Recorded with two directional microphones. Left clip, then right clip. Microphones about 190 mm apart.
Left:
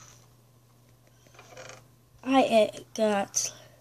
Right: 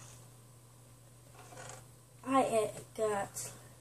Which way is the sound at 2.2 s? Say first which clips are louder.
Left 8 dB; 35° left (ahead or behind).